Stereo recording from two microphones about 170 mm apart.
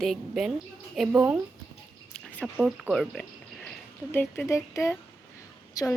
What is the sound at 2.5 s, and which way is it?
Speech, 5° right (ahead or behind).